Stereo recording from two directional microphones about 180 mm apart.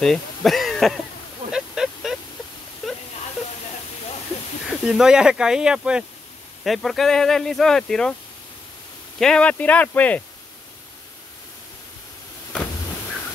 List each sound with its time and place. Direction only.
0.0 s speech: 5° left (ahead or behind)
1.5 s a sound: 5° right (ahead or behind)
4.6 s speech: centre (ahead or behind)
9.2 s speech: 5° left (ahead or behind)